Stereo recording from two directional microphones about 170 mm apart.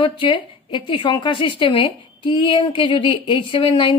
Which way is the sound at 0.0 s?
30° left (ahead or behind).